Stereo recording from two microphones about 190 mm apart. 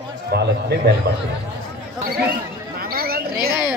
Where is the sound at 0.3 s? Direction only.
55° right (ahead or behind).